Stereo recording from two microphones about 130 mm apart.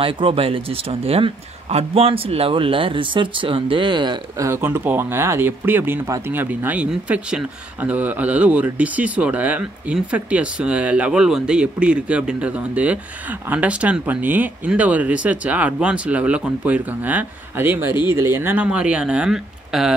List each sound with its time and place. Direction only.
0.0 s speech: 45° right (ahead or behind)
4.5 s speech: 15° right (ahead or behind)